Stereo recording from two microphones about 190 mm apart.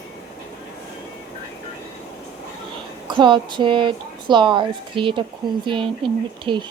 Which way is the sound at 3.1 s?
25° right (ahead or behind).